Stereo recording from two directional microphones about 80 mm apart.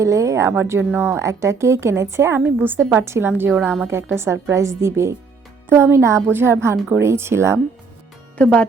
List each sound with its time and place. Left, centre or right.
0.0 s a woman's voice: right
8.4 s speech: centre